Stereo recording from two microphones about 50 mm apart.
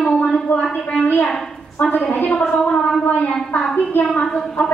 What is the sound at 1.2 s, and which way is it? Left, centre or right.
A woman's voice, centre.